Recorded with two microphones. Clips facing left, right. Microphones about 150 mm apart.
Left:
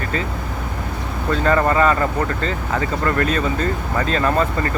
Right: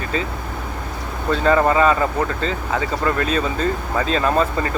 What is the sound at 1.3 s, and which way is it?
Speech, 10° right (ahead or behind).